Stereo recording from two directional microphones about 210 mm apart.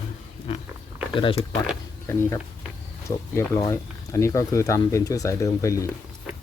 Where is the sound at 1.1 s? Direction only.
25° left (ahead or behind).